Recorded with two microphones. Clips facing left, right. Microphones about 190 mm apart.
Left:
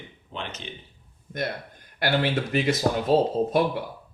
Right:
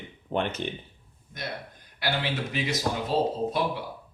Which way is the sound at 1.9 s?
55° left (ahead or behind).